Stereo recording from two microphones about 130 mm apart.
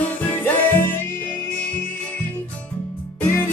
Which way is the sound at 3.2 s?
15° left (ahead or behind).